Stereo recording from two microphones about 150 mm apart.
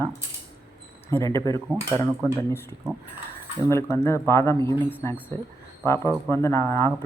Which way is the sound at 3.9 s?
20° left (ahead or behind).